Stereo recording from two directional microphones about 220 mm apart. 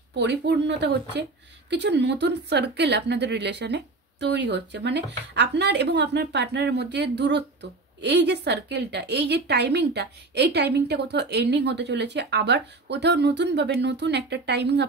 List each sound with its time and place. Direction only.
0.1 s a woman's voice: 50° right (ahead or behind)